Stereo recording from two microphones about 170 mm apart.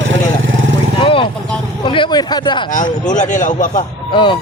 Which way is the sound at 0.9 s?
30° left (ahead or behind).